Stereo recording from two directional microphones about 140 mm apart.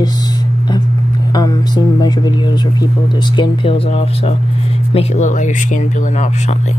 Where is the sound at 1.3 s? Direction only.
30° left (ahead or behind).